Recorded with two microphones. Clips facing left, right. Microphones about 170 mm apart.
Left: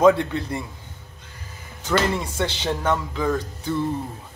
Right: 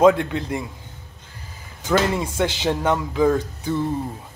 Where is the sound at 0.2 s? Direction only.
15° right (ahead or behind).